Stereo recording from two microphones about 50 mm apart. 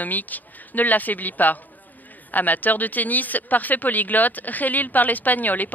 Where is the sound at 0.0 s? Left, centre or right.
Left.